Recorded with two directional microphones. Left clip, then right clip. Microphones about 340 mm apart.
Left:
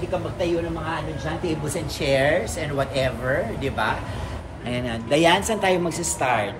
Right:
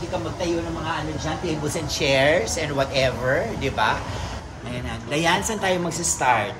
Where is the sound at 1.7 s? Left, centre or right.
Centre.